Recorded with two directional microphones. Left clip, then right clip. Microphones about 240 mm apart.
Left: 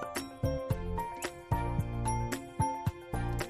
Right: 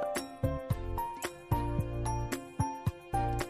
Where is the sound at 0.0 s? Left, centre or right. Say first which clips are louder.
Right 3 dB; centre.